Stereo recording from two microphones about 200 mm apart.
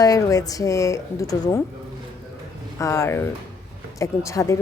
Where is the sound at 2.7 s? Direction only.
15° left (ahead or behind).